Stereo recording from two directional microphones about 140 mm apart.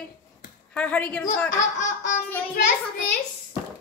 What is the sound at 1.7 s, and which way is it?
Laughter, 60° left (ahead or behind).